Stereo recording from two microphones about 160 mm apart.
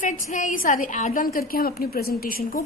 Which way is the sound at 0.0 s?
50° left (ahead or behind).